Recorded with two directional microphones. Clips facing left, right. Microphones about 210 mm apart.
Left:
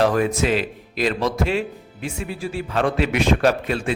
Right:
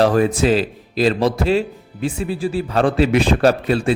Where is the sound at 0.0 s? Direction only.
30° right (ahead or behind).